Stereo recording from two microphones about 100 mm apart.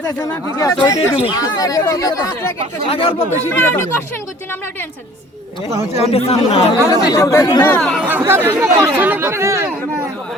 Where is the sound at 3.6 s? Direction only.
25° left (ahead or behind).